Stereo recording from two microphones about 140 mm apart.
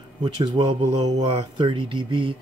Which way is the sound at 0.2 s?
35° right (ahead or behind).